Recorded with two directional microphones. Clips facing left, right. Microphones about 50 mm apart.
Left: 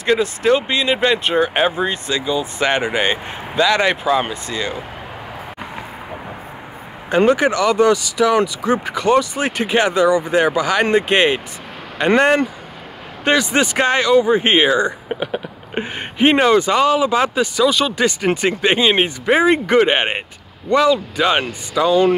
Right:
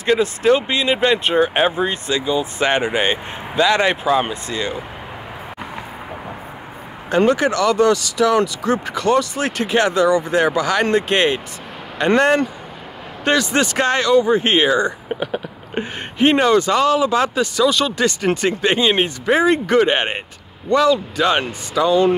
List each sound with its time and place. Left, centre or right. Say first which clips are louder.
0.0 s speech: even; centre
7.1 s speech: left 1 dB; centre
21.8 s speech: left 1 dB; centre